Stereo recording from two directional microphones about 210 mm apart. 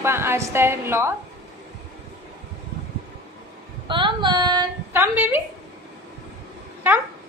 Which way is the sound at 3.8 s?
20° right (ahead or behind).